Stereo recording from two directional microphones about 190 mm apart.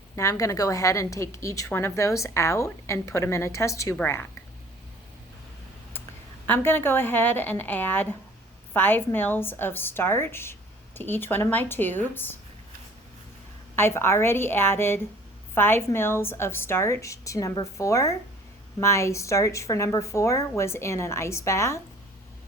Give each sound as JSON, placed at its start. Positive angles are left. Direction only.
{"t": 0.2, "sound": "a woman's voice", "side_deg": 15}
{"t": 6.5, "sound": "a woman's voice", "side_deg": 10}
{"t": 13.7, "sound": "a woman's voice", "side_deg": 10}